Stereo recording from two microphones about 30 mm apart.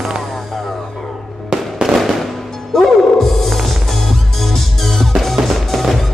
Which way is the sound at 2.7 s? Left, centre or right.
Centre.